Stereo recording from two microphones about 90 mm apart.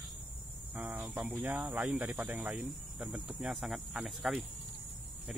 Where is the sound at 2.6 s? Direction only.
5° right (ahead or behind).